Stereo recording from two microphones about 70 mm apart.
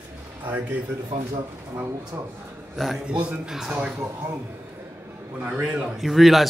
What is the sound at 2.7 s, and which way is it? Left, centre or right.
Speech, centre.